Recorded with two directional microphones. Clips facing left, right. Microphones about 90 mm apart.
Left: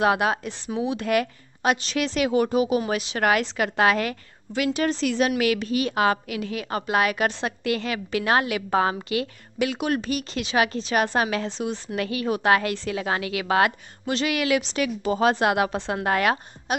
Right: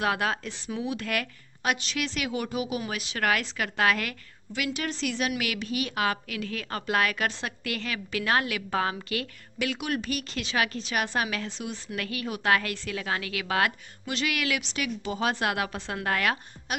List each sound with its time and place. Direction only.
0.0 s a woman's voice: 20° left (ahead or behind)
10.8 s a woman's voice: 35° left (ahead or behind)